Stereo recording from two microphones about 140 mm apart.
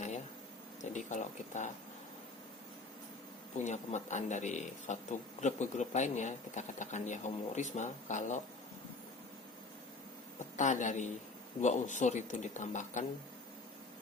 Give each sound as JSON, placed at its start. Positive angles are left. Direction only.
{"t": 0.8, "sound": "speech", "side_deg": 60}
{"t": 3.6, "sound": "speech", "side_deg": 60}
{"t": 10.6, "sound": "speech", "side_deg": 60}